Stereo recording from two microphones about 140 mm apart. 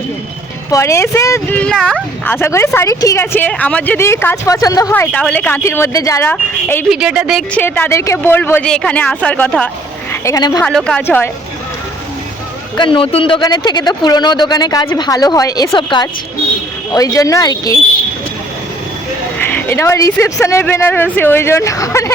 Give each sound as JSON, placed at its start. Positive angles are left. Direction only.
{"t": 0.7, "sound": "speech", "side_deg": 20}
{"t": 1.5, "sound": "speech", "side_deg": 10}
{"t": 6.8, "sound": "speech", "side_deg": -5}
{"t": 7.5, "sound": "speech", "side_deg": 15}
{"t": 10.1, "sound": "a woman's voice", "side_deg": 25}
{"t": 10.6, "sound": "speech", "side_deg": 5}
{"t": 12.7, "sound": "a woman's voice", "side_deg": 35}
{"t": 19.4, "sound": "speech", "side_deg": 15}